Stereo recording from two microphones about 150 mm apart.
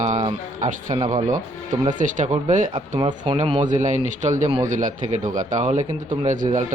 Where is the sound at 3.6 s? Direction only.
55° right (ahead or behind).